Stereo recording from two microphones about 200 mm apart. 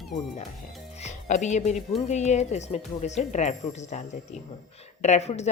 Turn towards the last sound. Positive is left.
turn(degrees=35)  # may be behind; listen again after turning